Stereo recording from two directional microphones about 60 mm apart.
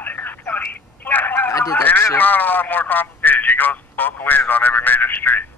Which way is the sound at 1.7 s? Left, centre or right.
Left.